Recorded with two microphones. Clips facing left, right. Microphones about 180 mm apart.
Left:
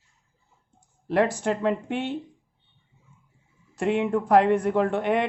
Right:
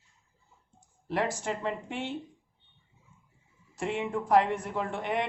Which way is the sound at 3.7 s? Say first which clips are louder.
Left 8 dB; 65° left (ahead or behind).